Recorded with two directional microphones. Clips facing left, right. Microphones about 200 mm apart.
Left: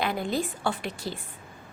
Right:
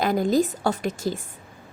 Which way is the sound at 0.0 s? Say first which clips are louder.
Right 7 dB; 40° right (ahead or behind).